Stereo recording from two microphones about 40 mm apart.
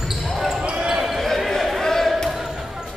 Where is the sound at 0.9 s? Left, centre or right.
Centre.